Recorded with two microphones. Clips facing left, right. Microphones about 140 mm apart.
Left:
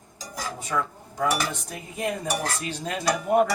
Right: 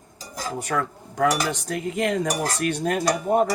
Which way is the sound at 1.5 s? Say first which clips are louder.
Right 9 dB; 80° right.